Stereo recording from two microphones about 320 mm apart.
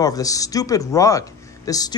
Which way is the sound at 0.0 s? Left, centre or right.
Centre.